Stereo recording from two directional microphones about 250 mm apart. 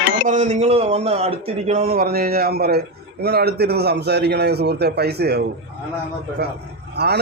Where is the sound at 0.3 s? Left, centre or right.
Right.